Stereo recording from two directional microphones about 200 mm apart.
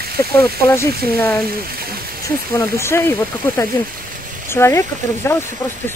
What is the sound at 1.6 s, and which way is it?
Speech, 50° right (ahead or behind).